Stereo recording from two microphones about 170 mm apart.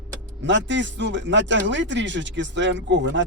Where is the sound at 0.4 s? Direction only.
90° right.